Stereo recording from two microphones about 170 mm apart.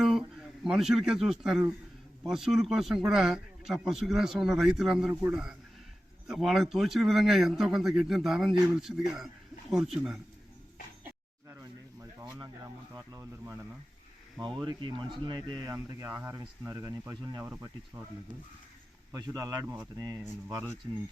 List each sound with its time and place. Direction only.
0.0 s a sound: centre (ahead or behind)
2.2 s speech: centre (ahead or behind)
12.2 s a sound: 25° right (ahead or behind)
12.9 s speech: 20° right (ahead or behind)
14.4 s speech: 25° right (ahead or behind)
19.1 s speech: 20° right (ahead or behind)
19.6 s speech: 10° right (ahead or behind)
20.0 s speech: 20° right (ahead or behind)